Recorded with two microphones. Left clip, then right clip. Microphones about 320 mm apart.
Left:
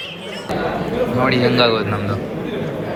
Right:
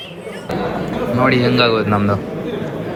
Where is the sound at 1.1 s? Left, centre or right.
Centre.